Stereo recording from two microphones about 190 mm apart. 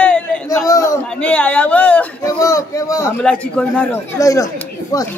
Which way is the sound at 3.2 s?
5° left (ahead or behind).